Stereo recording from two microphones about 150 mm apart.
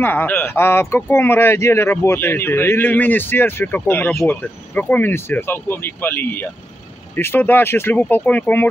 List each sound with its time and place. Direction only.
0.0 s speech: 15° left (ahead or behind)